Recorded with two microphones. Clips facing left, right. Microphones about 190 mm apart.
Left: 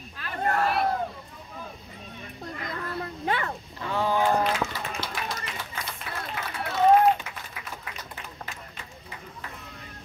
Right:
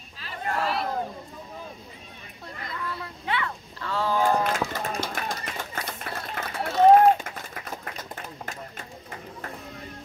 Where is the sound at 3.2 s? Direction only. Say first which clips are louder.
Left 1 dB; 45° left (ahead or behind).